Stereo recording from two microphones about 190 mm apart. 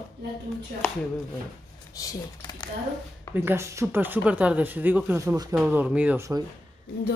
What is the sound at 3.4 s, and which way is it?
Speech, 15° right (ahead or behind).